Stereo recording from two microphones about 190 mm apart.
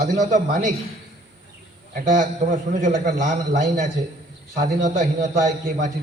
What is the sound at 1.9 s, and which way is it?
A man's voice, 45° right (ahead or behind).